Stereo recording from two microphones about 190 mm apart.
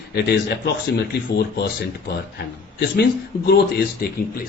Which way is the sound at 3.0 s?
60° left (ahead or behind).